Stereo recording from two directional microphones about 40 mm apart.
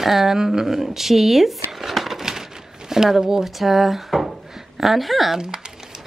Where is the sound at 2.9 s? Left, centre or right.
Centre.